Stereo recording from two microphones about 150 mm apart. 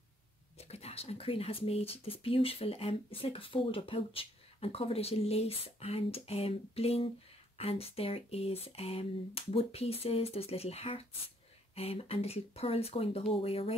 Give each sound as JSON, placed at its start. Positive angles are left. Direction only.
{"t": 0.6, "sound": "speech", "side_deg": 45}